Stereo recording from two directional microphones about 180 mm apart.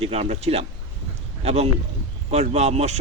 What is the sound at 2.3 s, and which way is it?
Speech, 35° right (ahead or behind).